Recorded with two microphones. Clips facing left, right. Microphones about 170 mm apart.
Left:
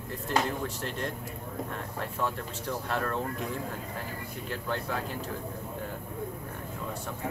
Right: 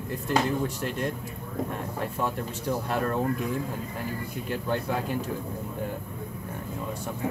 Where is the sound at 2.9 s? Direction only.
15° right (ahead or behind).